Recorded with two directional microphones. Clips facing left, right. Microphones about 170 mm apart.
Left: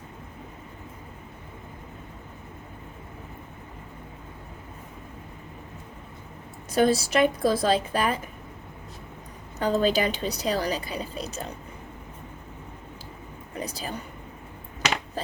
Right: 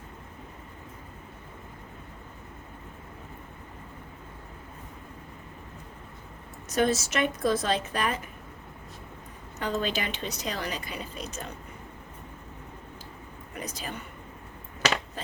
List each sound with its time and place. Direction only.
6.7 s a woman's voice: 30° left (ahead or behind)
9.6 s a woman's voice: 35° left (ahead or behind)
13.5 s speech: 35° left (ahead or behind)